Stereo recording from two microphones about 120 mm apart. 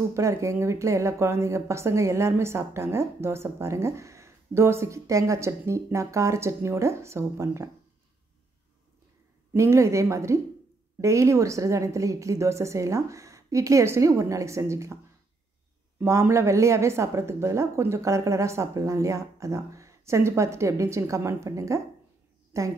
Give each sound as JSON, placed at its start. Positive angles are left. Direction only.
{"t": 0.1, "sound": "speech", "side_deg": -25}
{"t": 9.5, "sound": "speech", "side_deg": -25}
{"t": 16.0, "sound": "a woman's voice", "side_deg": -20}